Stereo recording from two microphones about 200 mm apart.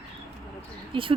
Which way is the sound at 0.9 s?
25° right (ahead or behind).